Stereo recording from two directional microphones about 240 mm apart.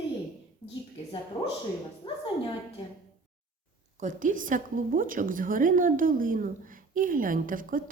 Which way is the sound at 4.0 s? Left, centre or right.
Right.